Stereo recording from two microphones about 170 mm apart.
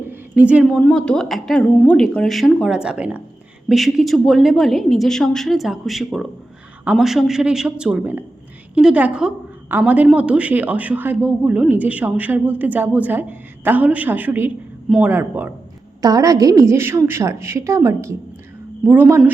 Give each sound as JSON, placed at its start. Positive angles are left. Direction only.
{"t": 0.0, "sound": "a sound", "side_deg": -10}
{"t": 0.8, "sound": "a woman's voice", "side_deg": 5}
{"t": 15.1, "sound": "a woman's voice", "side_deg": -15}